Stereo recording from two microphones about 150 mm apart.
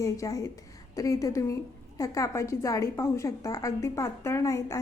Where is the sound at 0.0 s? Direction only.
20° left (ahead or behind).